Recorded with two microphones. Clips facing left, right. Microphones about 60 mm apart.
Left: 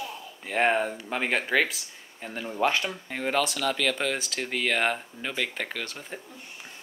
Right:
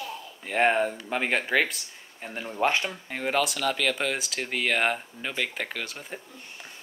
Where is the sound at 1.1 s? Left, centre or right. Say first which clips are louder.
Left 1 dB; centre.